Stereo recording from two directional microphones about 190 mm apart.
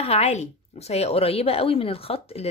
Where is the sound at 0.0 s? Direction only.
35° left (ahead or behind).